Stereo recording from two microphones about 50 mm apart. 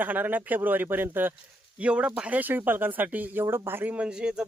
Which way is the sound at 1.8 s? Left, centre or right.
Right.